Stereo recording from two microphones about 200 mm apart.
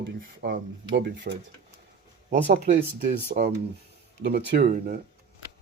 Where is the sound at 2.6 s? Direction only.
35° right (ahead or behind).